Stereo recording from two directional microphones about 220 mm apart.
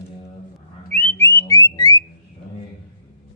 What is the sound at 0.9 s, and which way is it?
Music, 10° left (ahead or behind).